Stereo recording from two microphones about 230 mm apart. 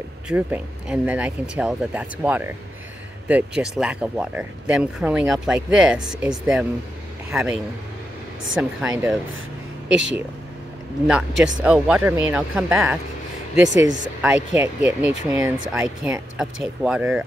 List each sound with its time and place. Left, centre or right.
0.3 s a man's voice: centre
8.6 s speech: centre
9.8 s speech: right
11.1 s speech: centre
13.6 s speech: right
14.2 s speech: centre